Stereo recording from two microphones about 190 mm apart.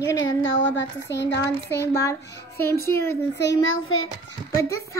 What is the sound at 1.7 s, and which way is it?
A child's voice, 15° left (ahead or behind).